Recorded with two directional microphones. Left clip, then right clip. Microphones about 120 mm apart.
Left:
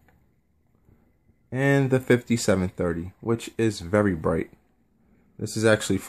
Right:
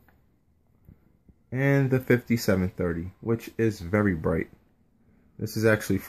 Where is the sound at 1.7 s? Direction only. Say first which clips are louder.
Left 3 dB; 5° left (ahead or behind).